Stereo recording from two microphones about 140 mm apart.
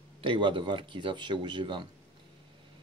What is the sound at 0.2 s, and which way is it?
Speech, 35° right (ahead or behind).